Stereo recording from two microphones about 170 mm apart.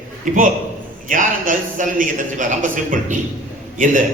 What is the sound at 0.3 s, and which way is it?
A man's voice, 50° right (ahead or behind).